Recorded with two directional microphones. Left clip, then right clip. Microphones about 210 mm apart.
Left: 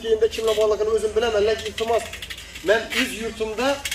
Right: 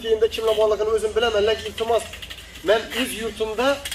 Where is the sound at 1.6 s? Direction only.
30° right (ahead or behind).